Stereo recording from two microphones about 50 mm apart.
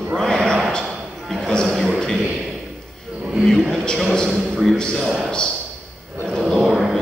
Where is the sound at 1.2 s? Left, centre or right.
Centre.